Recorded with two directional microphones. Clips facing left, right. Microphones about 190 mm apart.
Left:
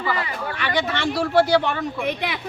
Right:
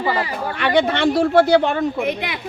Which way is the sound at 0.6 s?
55° right (ahead or behind).